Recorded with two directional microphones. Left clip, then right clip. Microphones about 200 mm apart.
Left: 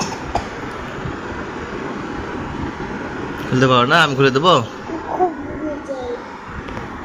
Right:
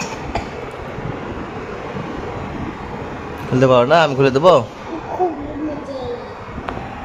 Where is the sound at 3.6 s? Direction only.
30° right (ahead or behind).